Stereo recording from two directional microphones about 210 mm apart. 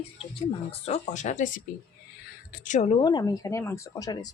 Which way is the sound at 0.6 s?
30° left (ahead or behind).